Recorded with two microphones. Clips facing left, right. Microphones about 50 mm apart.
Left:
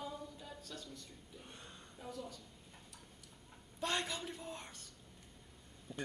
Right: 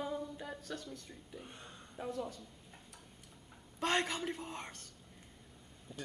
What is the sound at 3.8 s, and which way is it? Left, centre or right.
A man's voice, right.